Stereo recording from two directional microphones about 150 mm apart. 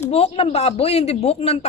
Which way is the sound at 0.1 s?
40° left (ahead or behind).